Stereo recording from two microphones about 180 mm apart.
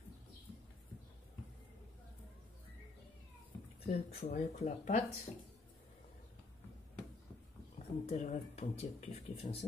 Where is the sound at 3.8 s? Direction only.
35° left (ahead or behind).